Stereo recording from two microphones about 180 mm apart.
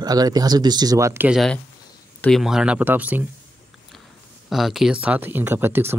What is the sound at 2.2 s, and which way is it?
Speech, centre (ahead or behind).